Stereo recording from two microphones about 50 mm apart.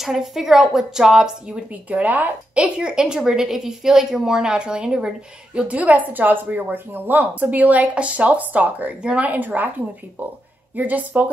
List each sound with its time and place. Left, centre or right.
0.0 s a woman's voice: centre
1.7 s speech: right
2.5 s a woman's voice: centre
5.7 s speech: right
10.8 s speech: right